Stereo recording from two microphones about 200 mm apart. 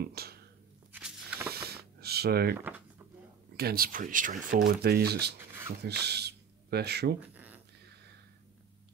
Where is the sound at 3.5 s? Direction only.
50° right (ahead or behind).